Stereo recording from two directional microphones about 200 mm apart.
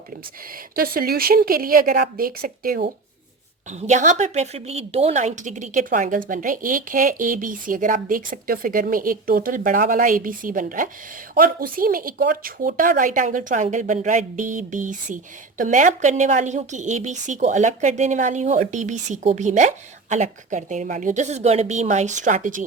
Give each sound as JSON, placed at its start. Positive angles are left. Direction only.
{"t": 0.8, "sound": "a woman's voice", "side_deg": -50}
{"t": 3.7, "sound": "a woman's voice", "side_deg": -35}